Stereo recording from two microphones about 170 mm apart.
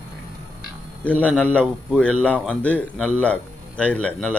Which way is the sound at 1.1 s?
10° left (ahead or behind).